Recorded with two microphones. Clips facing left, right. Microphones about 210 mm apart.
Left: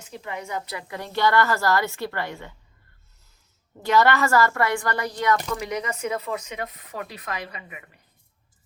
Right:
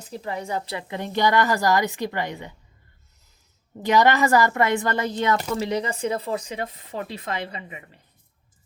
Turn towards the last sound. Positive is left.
turn(degrees=-25)  # may be behind; listen again after turning